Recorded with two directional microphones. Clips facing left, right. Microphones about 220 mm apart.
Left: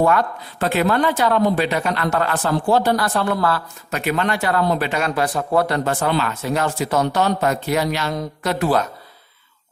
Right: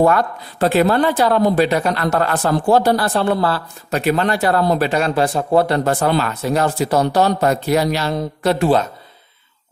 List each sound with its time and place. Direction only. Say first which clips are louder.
0.0 s speech: right 3 dB; 40° right (ahead or behind)